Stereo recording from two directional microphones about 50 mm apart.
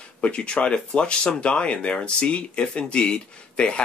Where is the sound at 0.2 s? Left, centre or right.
Left.